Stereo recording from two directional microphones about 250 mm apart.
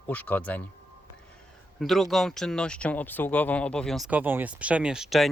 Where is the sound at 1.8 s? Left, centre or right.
Centre.